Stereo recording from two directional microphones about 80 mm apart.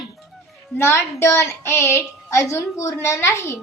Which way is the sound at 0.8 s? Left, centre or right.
Left.